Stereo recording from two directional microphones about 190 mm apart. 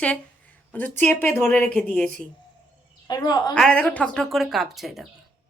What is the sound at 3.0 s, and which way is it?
Speech, 20° left (ahead or behind).